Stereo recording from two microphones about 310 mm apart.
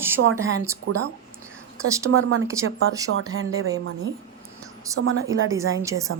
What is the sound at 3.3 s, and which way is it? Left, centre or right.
Speech, right.